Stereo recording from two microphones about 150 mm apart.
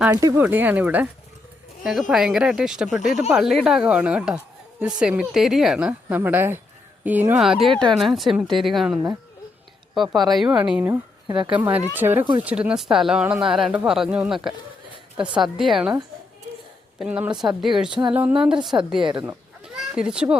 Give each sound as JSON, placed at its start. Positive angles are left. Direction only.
{"t": 0.1, "sound": "speech", "side_deg": -25}
{"t": 0.3, "sound": "speech", "side_deg": -10}
{"t": 7.4, "sound": "speech", "side_deg": 0}
{"t": 17.0, "sound": "speech", "side_deg": -10}
{"t": 19.6, "sound": "chicken", "side_deg": -5}